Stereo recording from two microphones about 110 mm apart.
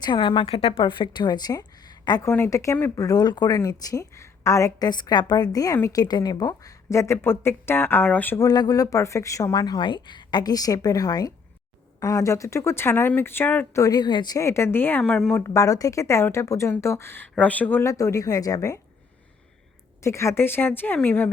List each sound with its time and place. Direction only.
0.0 s a woman's voice: 45° left (ahead or behind)
2.2 s speech: 25° left (ahead or behind)
8.4 s speech: 35° left (ahead or behind); by 13.8 s 15° left (ahead or behind)
13.8 s speech: 40° left (ahead or behind)
14.3 s speech: 25° left (ahead or behind)
15.1 s a woman's voice: 5° left (ahead or behind)
15.4 s speech: 30° left (ahead or behind)
17.9 s speech: 30° left (ahead or behind)
20.0 s speech: 25° left (ahead or behind)